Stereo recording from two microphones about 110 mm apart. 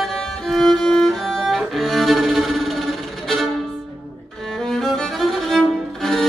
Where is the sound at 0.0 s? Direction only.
Centre (ahead or behind).